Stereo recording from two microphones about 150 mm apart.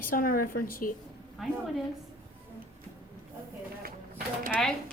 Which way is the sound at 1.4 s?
Centre (ahead or behind).